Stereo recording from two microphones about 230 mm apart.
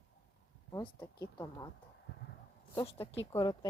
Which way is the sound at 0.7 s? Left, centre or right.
Centre.